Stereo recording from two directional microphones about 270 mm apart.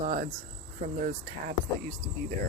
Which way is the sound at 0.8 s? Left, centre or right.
Right.